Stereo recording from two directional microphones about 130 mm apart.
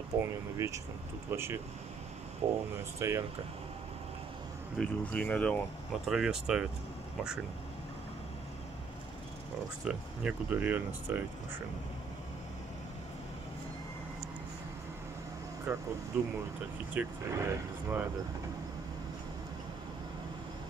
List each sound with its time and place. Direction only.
0.2 s speech: 25° right (ahead or behind)
3.0 s speech: 20° right (ahead or behind)
4.7 s speech: 10° left (ahead or behind)
6.0 s speech: 5° right (ahead or behind)
9.8 s speech: 10° right (ahead or behind)
15.7 s speech: 10° right (ahead or behind)